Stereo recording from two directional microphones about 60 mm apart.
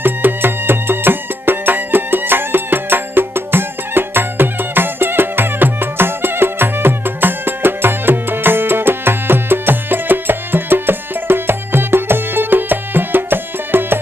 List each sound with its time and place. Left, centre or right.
0.0 s music: right